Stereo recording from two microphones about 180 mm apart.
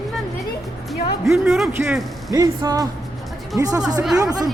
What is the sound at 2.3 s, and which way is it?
Speech, 20° right (ahead or behind).